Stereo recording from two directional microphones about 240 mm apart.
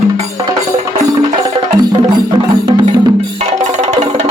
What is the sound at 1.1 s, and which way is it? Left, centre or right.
Music, centre.